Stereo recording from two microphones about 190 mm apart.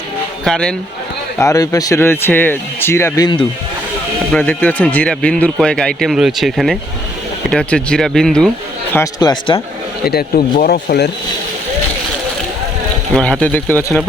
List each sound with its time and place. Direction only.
0.4 s speech: 5° left (ahead or behind)
1.4 s speech: 20° left (ahead or behind)
4.3 s speech: 10° left (ahead or behind)
8.9 s speech: 15° left (ahead or behind)
10.1 s speech: 50° left (ahead or behind)
13.1 s speech: 5° left (ahead or behind)